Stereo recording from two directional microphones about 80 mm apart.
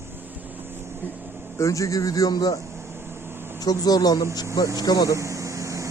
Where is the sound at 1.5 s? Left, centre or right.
Left.